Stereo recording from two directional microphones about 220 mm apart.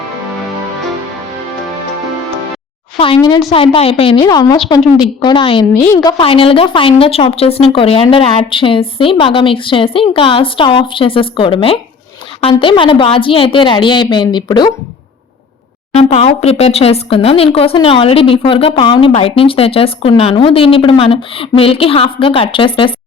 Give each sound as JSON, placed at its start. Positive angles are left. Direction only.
{"t": 3.0, "sound": "a woman's voice", "side_deg": 20}
{"t": 6.1, "sound": "speech", "side_deg": 25}
{"t": 15.9, "sound": "speech", "side_deg": 30}